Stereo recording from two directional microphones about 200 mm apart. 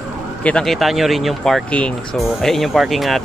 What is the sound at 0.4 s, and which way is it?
Speech, 5° left (ahead or behind).